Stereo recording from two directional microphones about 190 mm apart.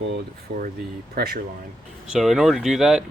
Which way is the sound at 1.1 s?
55° right (ahead or behind).